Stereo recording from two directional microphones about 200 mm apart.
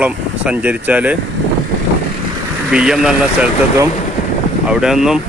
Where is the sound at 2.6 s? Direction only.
5° right (ahead or behind).